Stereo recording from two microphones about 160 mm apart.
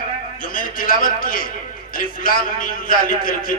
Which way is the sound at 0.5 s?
60° left (ahead or behind).